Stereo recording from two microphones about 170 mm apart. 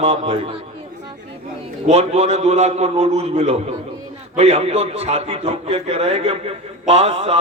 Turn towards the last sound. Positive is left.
turn(degrees=-35)  # may be behind; listen again after turning